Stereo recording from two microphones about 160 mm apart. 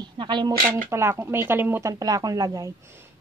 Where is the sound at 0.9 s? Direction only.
15° right (ahead or behind).